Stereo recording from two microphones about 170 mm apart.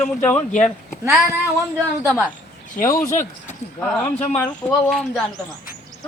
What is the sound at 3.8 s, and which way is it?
Speech, 10° left (ahead or behind).